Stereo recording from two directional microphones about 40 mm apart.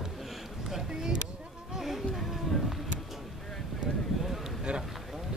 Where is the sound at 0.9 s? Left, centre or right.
Right.